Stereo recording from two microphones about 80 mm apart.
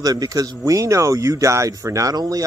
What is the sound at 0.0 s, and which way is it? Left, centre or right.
Speech, right.